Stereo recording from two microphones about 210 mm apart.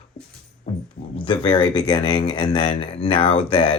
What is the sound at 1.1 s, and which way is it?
Speech, 25° left (ahead or behind).